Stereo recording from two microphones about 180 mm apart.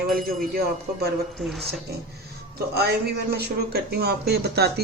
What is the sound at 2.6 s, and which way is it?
Speech, 65° right (ahead or behind).